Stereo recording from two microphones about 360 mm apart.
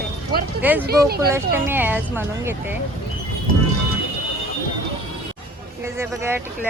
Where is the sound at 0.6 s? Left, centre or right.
Centre.